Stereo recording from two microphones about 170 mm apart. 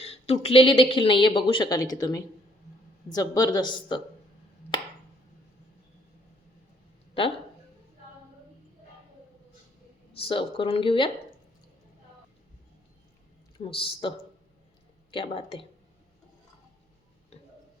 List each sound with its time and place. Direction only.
0.0 s speech: 35° left (ahead or behind)
10.2 s speech: 30° left (ahead or behind)
13.6 s speech: 30° left (ahead or behind)
15.1 s speech: 30° left (ahead or behind)
17.3 s a sound: 40° left (ahead or behind)